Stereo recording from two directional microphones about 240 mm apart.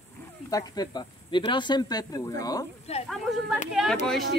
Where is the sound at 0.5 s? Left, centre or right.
Centre.